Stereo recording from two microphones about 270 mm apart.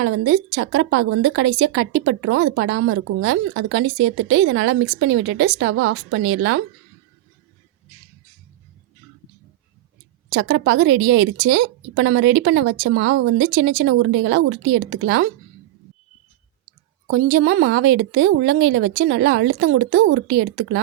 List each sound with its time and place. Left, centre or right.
0.0 s a woman's voice: right
10.3 s a woman's voice: right
17.1 s a woman's voice: right